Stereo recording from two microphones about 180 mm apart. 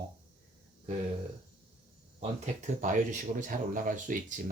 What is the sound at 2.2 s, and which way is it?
Speech, 45° right (ahead or behind).